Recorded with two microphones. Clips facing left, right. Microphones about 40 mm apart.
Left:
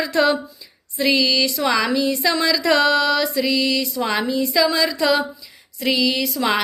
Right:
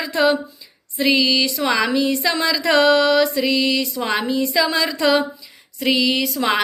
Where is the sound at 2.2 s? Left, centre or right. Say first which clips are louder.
Left 1 dB; right.